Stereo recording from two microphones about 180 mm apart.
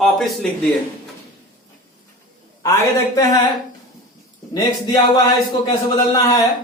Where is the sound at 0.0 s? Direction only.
Centre (ahead or behind).